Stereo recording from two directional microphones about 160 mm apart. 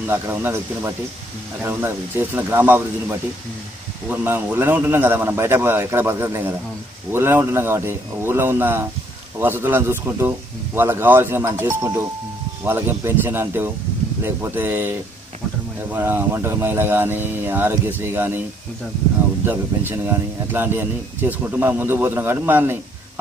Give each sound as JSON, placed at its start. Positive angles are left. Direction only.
{"t": 0.0, "sound": "speech", "side_deg": -15}
{"t": 19.4, "sound": "speech", "side_deg": -15}